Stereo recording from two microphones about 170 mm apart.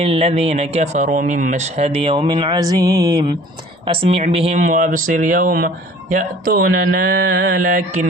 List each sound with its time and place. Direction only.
0.0 s speech: 35° right (ahead or behind)
3.8 s speech: 35° right (ahead or behind); by 8.0 s 50° right (ahead or behind)